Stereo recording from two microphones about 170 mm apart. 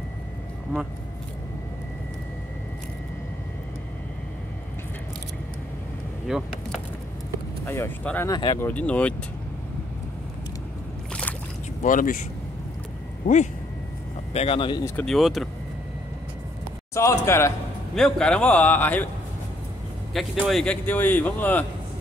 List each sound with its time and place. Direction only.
6.2 s a sound: centre (ahead or behind)
7.6 s speech: 15° left (ahead or behind)
8.3 s speech: 25° left (ahead or behind)
8.5 s a man's voice: 10° left (ahead or behind)
11.8 s speech: 50° left (ahead or behind)
14.3 s speech: 35° left (ahead or behind)
15.0 s speech: centre (ahead or behind)
16.9 s a man's voice: 15° left (ahead or behind)
17.9 s a man's voice: 5° left (ahead or behind)
20.2 s a man's voice: centre (ahead or behind)